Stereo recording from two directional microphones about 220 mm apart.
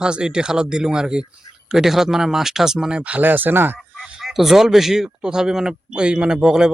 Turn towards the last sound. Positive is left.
turn(degrees=-5)  # may be behind; listen again after turning